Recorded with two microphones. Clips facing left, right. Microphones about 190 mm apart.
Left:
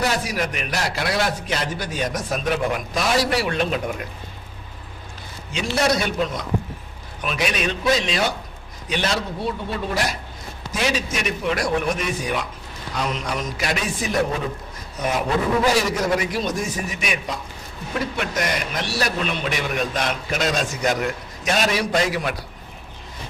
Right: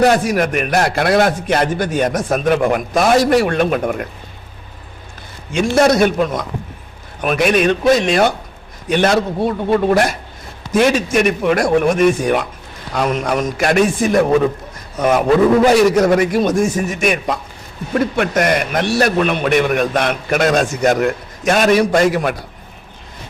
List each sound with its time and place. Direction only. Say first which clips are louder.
0.0 s a man's voice: right 10 dB; 55° right (ahead or behind)
5.5 s a man's voice: right 8 dB; 50° right (ahead or behind)